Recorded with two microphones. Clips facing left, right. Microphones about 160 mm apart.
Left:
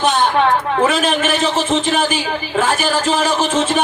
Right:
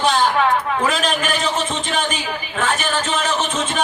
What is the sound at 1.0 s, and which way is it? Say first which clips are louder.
Speech: left 4 dB; 30° left (ahead or behind).